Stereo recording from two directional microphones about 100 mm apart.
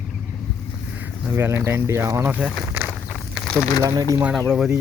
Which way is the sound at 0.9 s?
20° right (ahead or behind).